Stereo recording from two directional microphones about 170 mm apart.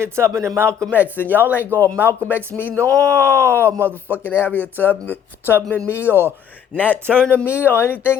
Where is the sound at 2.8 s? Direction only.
20° right (ahead or behind).